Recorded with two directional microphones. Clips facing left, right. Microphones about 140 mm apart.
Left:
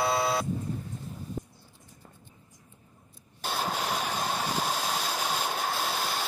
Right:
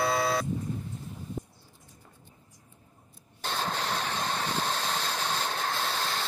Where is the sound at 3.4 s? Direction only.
10° left (ahead or behind).